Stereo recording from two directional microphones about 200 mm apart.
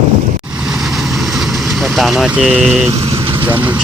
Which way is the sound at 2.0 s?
Centre (ahead or behind).